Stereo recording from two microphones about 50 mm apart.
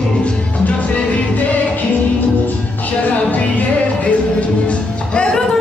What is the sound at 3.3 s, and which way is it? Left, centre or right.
Music, left.